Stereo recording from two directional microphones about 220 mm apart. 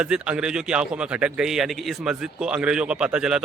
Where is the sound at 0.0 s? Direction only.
5° right (ahead or behind).